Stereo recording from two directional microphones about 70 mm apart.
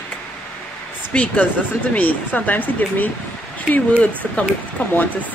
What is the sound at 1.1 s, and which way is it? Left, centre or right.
Speech, centre.